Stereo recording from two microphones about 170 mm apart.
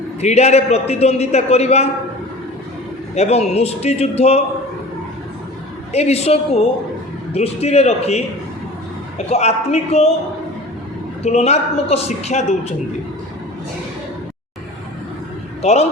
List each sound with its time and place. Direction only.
0.2 s a man's voice: 40° left (ahead or behind)
3.2 s a man's voice: 40° left (ahead or behind)
5.9 s a man's voice: 40° left (ahead or behind)
11.2 s a man's voice: 40° left (ahead or behind)
15.6 s a man's voice: 40° left (ahead or behind)